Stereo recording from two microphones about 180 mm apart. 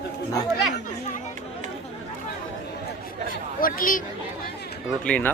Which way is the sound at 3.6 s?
50° left (ahead or behind).